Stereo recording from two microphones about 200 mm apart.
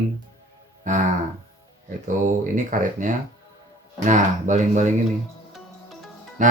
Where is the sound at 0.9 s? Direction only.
40° right (ahead or behind).